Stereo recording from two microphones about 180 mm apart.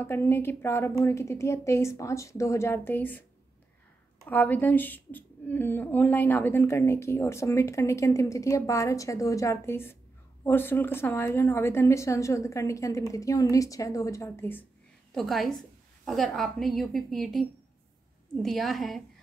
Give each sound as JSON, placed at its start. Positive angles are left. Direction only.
{"t": 0.0, "sound": "a woman's voice", "side_deg": 15}
{"t": 4.3, "sound": "a woman's voice", "side_deg": 10}
{"t": 15.1, "sound": "a woman's voice", "side_deg": 0}